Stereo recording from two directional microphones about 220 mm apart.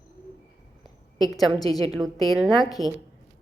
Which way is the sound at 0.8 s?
15° left (ahead or behind).